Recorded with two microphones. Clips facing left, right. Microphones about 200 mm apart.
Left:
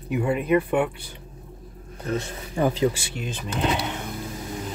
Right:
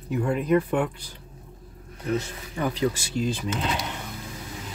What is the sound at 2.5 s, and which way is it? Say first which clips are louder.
Speech: left 4 dB; 30° left (ahead or behind).